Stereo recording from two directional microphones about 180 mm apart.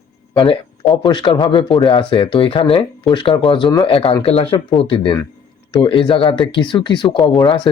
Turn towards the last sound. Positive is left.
turn(degrees=25)  # may be behind; listen again after turning